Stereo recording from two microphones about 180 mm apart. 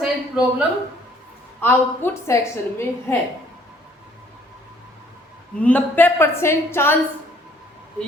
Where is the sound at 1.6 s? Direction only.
10° left (ahead or behind).